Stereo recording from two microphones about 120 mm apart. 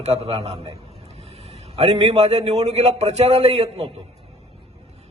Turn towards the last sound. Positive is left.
turn(degrees=-60)  # may be behind; listen again after turning